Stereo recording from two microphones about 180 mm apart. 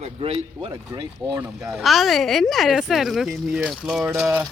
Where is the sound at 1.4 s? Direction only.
5° right (ahead or behind).